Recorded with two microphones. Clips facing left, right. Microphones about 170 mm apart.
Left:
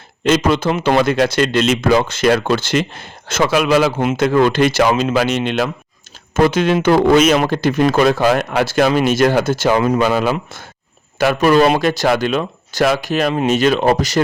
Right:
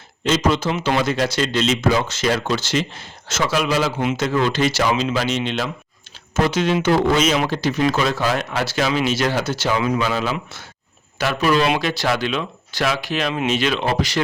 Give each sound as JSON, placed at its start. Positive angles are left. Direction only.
{"t": 0.3, "sound": "a man's voice", "side_deg": 60}